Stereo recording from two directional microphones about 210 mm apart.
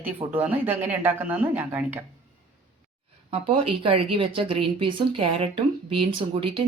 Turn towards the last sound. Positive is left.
turn(degrees=-25)  # may be behind; listen again after turning